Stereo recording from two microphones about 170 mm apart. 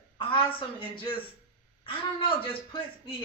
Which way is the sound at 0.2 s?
30° left (ahead or behind).